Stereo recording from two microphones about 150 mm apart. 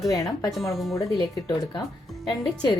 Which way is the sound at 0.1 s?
20° left (ahead or behind).